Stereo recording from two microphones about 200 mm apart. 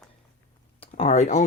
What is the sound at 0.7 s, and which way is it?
Speech, 30° left (ahead or behind).